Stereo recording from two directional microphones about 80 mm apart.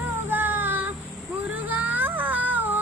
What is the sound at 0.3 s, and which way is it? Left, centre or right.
Music, right.